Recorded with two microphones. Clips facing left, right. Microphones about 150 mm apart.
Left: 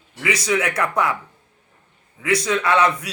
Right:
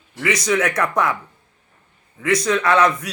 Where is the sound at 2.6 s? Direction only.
30° left (ahead or behind).